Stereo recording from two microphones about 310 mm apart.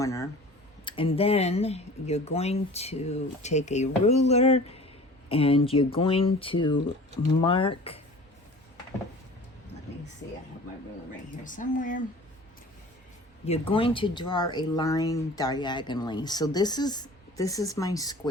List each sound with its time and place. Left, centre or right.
0.0 s speech: centre
11.4 s speech: left
13.4 s speech: centre